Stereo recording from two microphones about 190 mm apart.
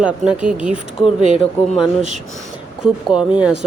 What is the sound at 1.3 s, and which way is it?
Speech, 30° left (ahead or behind).